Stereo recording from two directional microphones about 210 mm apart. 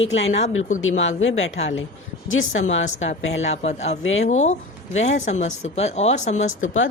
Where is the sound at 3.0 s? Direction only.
30° left (ahead or behind).